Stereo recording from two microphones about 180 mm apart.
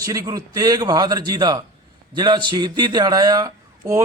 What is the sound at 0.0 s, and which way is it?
A man's voice, 20° right (ahead or behind).